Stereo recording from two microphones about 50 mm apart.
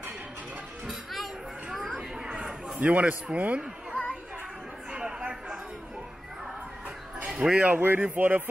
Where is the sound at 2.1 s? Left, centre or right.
Centre.